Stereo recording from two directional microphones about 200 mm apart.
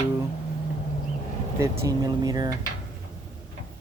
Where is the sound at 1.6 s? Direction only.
15° right (ahead or behind).